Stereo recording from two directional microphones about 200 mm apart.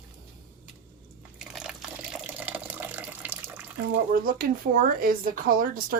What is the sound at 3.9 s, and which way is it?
Speech, 45° right (ahead or behind).